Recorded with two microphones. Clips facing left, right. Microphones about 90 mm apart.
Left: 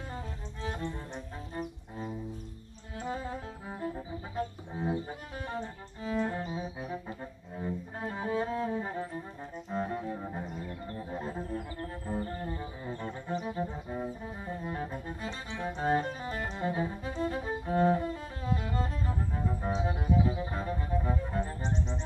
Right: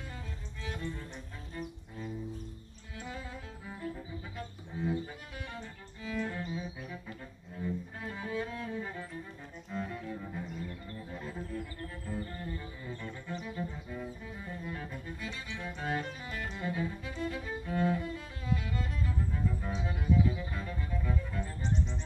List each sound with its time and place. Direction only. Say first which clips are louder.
0.1 s music: left 5 dB; 35° left (ahead or behind)
1.6 s music: left 2 dB; 45° left (ahead or behind)
9.7 s double bass: left 5 dB; 35° left (ahead or behind)
10.6 s music: left 3 dB; 30° left (ahead or behind)